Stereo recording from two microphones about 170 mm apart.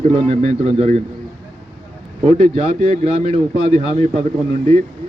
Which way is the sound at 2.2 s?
40° right (ahead or behind).